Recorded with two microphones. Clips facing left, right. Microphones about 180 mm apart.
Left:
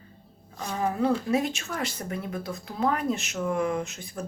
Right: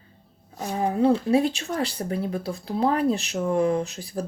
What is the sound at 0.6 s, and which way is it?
Speech, 35° right (ahead or behind).